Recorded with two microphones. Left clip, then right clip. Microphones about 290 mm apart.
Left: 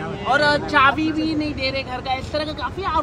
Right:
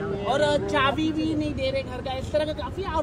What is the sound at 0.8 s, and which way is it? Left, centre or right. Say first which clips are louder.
Speech: left 7 dB; left.